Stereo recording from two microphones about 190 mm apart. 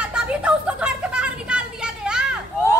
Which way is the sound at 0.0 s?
5° right (ahead or behind).